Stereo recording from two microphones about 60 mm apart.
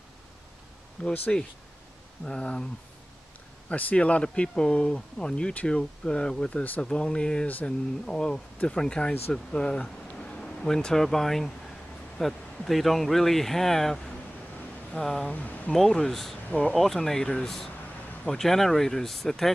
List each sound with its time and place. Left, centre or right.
1.0 s speech: centre
2.2 s speech: centre
3.6 s speech: left
7.4 s speech: left
8.1 s speech: centre
15.3 s speech: left
15.7 s speech: centre
16.4 s speech: centre
16.7 s speech: centre